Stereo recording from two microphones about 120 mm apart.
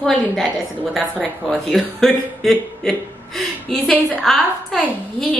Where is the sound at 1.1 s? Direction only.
15° right (ahead or behind).